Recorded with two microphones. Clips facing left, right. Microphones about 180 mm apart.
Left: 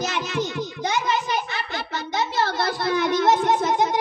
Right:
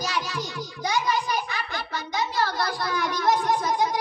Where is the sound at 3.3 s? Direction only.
25° left (ahead or behind).